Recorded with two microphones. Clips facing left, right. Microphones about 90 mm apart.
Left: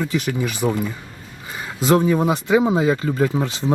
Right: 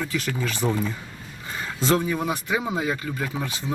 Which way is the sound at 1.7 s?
15° left (ahead or behind).